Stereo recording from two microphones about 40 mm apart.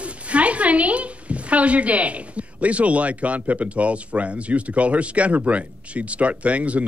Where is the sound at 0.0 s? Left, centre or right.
Right.